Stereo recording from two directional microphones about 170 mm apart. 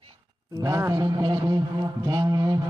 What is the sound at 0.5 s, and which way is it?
A man's voice, 20° right (ahead or behind).